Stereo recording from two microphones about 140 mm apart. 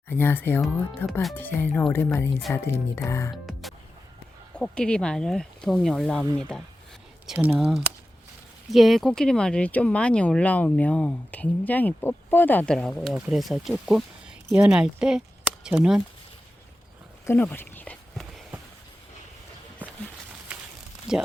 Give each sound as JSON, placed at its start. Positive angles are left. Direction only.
{"t": 0.1, "sound": "speech", "side_deg": 15}
{"t": 3.4, "sound": "music", "side_deg": 0}
{"t": 4.5, "sound": "speech", "side_deg": 5}
{"t": 7.3, "sound": "speech", "side_deg": -10}
{"t": 8.7, "sound": "speech", "side_deg": 0}
{"t": 17.2, "sound": "a sound", "side_deg": 15}
{"t": 21.1, "sound": "speech", "side_deg": -5}